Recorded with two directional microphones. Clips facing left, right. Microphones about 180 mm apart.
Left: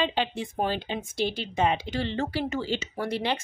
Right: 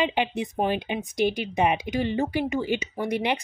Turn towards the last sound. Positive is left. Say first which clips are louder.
# right 3 dB
turn(degrees=-15)  # may be behind; listen again after turning